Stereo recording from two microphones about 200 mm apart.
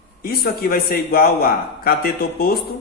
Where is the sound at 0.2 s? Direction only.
50° left (ahead or behind).